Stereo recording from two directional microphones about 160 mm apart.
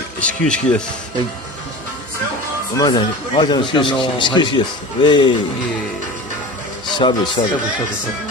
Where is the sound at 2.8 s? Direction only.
25° left (ahead or behind).